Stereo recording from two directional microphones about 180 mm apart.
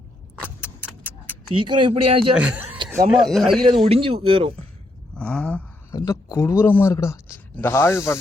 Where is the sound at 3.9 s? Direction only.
30° right (ahead or behind).